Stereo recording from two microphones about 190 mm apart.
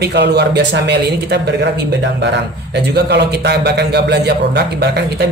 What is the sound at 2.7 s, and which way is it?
A man's voice, 60° right (ahead or behind).